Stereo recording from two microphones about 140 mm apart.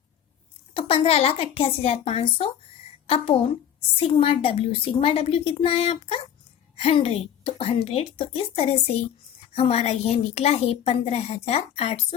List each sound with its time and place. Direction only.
0.7 s a child's voice: 40° left (ahead or behind)